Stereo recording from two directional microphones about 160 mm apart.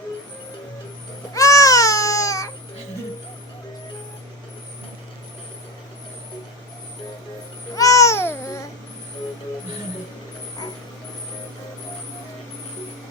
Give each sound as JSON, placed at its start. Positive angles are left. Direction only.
{"t": 1.3, "sound": "baby cry", "side_deg": 20}
{"t": 7.8, "sound": "babbling", "side_deg": 20}